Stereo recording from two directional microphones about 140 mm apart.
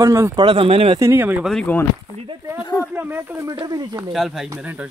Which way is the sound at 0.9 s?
15° right (ahead or behind).